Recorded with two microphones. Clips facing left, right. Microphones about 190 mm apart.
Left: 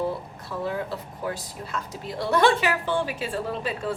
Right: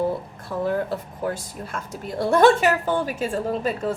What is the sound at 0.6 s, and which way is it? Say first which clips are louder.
A woman's voice: right 5 dB; 45° right (ahead or behind).